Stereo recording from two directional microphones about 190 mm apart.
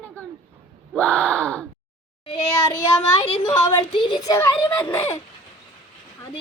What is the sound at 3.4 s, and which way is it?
Gasp, 10° left (ahead or behind).